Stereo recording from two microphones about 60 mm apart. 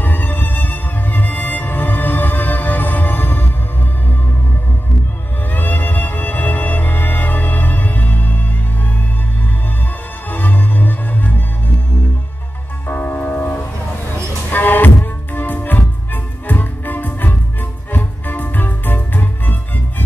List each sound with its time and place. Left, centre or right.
0.0 s music: left
5.5 s music: left
10.3 s music: left
12.8 s music: left
14.1 s a sound: left
15.3 s music: left